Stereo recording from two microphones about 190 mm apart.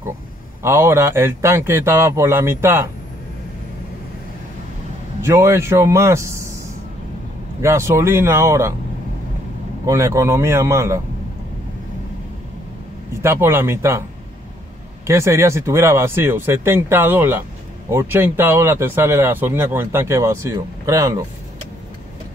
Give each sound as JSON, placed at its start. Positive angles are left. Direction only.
{"t": 0.6, "sound": "speech", "side_deg": -15}
{"t": 5.2, "sound": "speech", "side_deg": -15}
{"t": 7.6, "sound": "speech", "side_deg": -15}
{"t": 9.8, "sound": "speech", "side_deg": -15}
{"t": 13.2, "sound": "speech", "side_deg": -15}
{"t": 15.0, "sound": "speech", "side_deg": -15}